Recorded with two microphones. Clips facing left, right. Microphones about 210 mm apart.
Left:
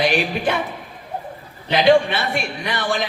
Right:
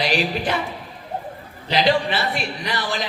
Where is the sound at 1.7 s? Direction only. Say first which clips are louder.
Left 5 dB; 55° left (ahead or behind).